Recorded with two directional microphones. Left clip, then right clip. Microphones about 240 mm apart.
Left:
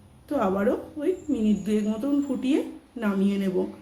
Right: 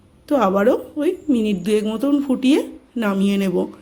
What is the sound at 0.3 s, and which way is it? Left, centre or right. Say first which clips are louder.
A woman's voice: right 8 dB; right.